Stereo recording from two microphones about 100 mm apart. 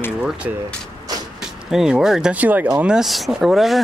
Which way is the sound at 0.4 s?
10° right (ahead or behind).